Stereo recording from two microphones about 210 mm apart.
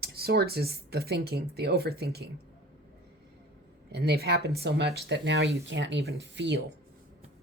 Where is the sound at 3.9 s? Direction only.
50° right (ahead or behind).